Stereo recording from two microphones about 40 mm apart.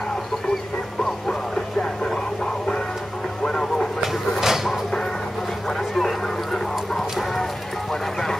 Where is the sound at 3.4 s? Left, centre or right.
Centre.